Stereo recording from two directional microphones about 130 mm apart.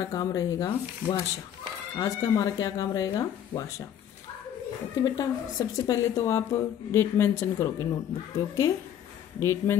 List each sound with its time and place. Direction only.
0.0 s a woman's voice: 30° left (ahead or behind)
5.0 s a woman's voice: 30° left (ahead or behind)
9.4 s a woman's voice: 20° left (ahead or behind)